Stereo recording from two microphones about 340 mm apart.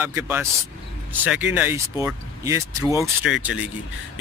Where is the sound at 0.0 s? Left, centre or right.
Centre.